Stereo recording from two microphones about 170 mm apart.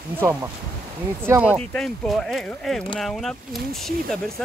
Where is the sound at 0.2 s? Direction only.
15° right (ahead or behind).